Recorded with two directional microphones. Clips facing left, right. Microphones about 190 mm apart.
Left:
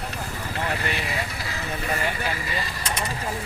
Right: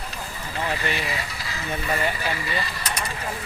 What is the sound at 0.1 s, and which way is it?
Vehicle, 55° left (ahead or behind).